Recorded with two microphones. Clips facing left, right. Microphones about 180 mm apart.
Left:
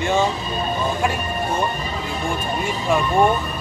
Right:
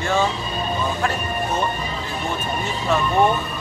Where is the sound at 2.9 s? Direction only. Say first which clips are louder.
Left 1 dB; 10° left (ahead or behind).